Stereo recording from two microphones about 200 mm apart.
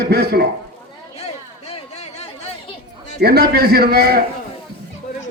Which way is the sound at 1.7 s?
35° left (ahead or behind).